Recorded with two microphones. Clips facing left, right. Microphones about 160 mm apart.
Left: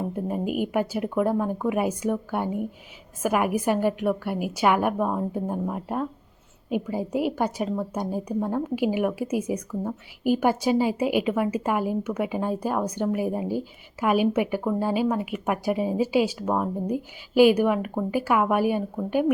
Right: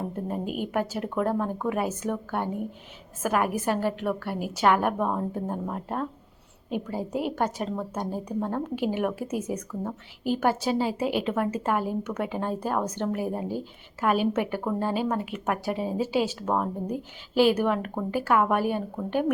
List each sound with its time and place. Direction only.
0.6 s a woman's voice: 10° left (ahead or behind)